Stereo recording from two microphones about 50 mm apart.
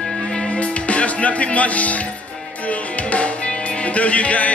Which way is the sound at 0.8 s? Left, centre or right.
Left.